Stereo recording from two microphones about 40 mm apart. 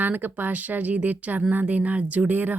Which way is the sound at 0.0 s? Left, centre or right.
Right.